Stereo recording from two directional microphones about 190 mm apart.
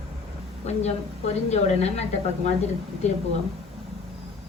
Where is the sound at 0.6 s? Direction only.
35° left (ahead or behind).